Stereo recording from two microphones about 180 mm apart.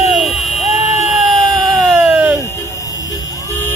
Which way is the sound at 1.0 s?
Centre (ahead or behind).